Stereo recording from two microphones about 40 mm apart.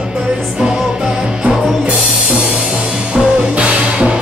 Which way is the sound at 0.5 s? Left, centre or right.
Centre.